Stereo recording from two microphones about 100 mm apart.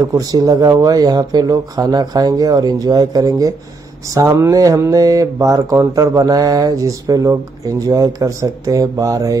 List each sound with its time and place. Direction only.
0.0 s speech: 40° right (ahead or behind)